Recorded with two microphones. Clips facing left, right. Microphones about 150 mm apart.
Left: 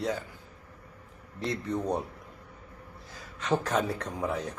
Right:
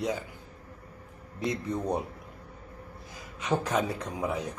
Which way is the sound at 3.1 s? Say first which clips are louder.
Left 1 dB; 10° right (ahead or behind).